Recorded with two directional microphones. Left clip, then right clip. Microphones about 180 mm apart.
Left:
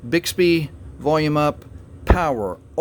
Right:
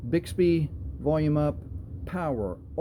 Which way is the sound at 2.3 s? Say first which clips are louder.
Left 7 dB; 30° left (ahead or behind).